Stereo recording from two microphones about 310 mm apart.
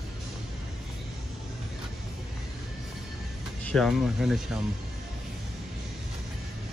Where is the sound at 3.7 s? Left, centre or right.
Centre.